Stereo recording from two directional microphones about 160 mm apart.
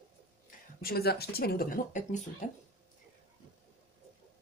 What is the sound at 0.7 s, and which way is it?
Speech, 75° left (ahead or behind).